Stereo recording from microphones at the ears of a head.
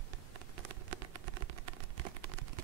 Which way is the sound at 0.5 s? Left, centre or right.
Right.